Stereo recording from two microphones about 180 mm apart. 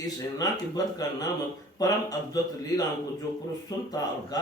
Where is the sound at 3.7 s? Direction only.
20° left (ahead or behind).